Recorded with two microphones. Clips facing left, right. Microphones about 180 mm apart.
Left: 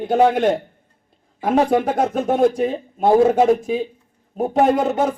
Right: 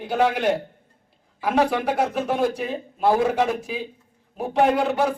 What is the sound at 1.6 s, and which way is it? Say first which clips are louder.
A man's voice: left 5 dB; 45° left (ahead or behind).